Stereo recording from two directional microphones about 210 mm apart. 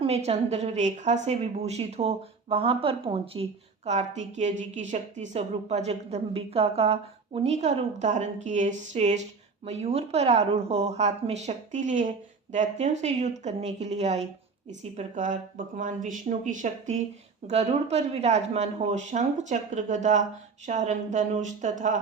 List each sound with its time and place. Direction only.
0.0 s speech: 30° right (ahead or behind)